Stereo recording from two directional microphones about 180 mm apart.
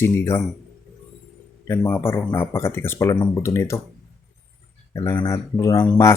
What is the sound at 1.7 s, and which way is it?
Speech, 10° left (ahead or behind).